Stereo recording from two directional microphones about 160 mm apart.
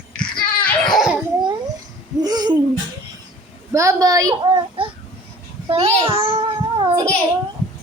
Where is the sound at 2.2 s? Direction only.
25° right (ahead or behind).